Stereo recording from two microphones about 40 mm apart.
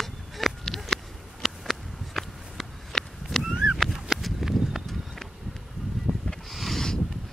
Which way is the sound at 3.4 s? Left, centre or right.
Centre.